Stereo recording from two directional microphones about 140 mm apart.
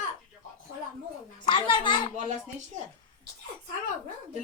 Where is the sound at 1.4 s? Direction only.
35° left (ahead or behind).